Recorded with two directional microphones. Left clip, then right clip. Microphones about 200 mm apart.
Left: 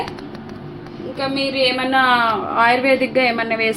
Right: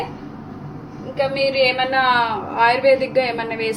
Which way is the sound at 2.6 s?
35° left (ahead or behind).